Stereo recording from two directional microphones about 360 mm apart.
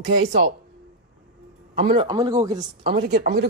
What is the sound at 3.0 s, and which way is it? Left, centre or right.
Speech, right.